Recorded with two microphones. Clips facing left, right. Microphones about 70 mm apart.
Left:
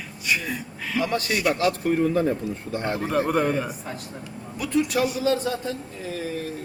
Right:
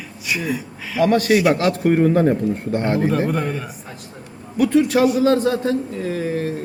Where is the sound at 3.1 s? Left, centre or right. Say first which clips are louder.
Right 1 dB; centre.